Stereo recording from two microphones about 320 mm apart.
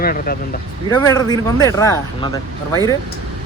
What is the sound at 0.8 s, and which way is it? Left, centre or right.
Speech, centre.